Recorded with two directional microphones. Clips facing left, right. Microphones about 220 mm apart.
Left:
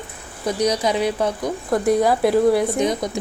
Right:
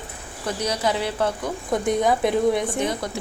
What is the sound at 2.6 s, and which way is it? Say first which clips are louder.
Speech: left 5 dB; 15° left (ahead or behind).